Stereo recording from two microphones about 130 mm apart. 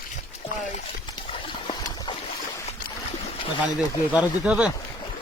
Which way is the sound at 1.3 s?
40° left (ahead or behind).